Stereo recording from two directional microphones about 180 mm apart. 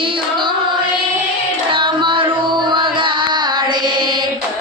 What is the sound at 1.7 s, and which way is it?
Music, 25° right (ahead or behind).